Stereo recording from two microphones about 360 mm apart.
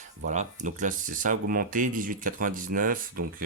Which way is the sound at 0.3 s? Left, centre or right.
Right.